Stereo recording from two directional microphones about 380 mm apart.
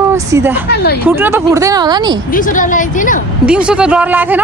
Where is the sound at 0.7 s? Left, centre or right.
Left.